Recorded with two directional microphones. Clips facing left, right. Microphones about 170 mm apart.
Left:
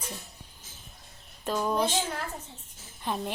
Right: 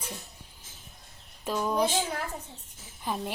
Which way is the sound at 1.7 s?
10° right (ahead or behind).